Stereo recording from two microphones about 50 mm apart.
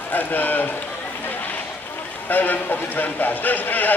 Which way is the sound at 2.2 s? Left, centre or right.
Left.